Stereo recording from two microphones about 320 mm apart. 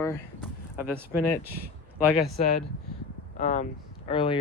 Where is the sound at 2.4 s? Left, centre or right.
Left.